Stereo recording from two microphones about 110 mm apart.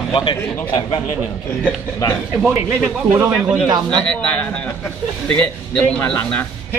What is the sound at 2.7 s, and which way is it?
Speech, 25° right (ahead or behind).